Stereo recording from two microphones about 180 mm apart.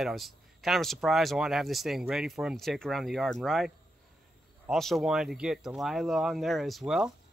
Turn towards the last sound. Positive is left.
turn(degrees=0)  # may be behind; listen again after turning